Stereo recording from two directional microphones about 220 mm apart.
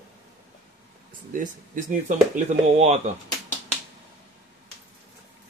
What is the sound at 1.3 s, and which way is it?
Speech, 35° right (ahead or behind).